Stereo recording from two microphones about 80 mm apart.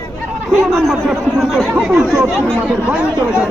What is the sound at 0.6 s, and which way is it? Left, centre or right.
Speech, centre.